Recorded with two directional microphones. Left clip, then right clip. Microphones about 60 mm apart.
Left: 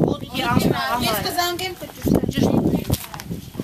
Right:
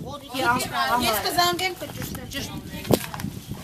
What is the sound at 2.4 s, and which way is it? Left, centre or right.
Speech, centre.